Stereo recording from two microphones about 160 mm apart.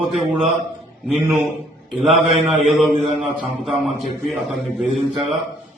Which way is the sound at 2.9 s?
35° right (ahead or behind).